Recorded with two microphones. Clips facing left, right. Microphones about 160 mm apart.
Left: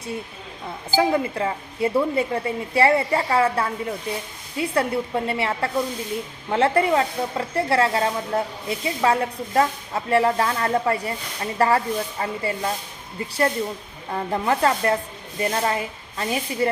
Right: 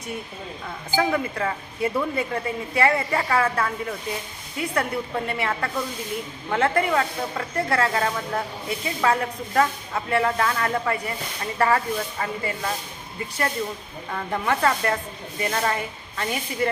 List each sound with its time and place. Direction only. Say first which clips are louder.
0.9 s speech: left 3 dB; 30° left (ahead or behind)
14.1 s speech: left 3 dB; 30° left (ahead or behind)